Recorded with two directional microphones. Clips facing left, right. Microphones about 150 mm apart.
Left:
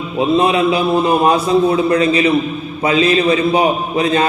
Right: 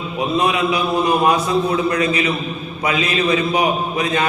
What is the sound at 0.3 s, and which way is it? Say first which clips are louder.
A man's voice: left 4 dB; 25° left (ahead or behind).